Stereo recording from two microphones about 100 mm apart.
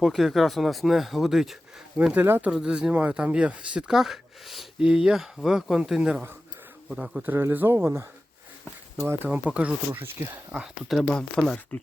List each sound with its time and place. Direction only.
0.0 s speech: centre (ahead or behind)
2.1 s speech: 20° right (ahead or behind)
10.5 s speech: 5° right (ahead or behind)
11.0 s speech: 5° left (ahead or behind)